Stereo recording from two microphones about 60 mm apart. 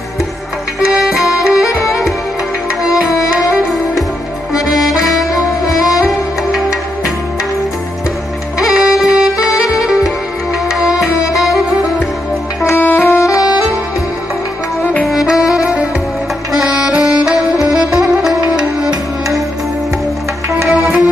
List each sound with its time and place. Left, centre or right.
0.7 s music: centre
4.7 s music: centre
5.1 s music: left
5.9 s music: centre
8.7 s saxophone: centre
10.7 s music: centre
12.7 s saxophone: left
13.2 s saxophone: left
15.0 s saxophone: centre
17.6 s music: centre
20.6 s music: centre